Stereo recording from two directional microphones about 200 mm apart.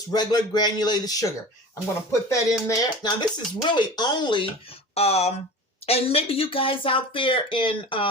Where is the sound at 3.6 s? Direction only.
20° left (ahead or behind).